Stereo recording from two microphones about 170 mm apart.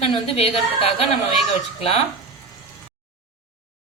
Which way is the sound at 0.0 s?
35° left (ahead or behind).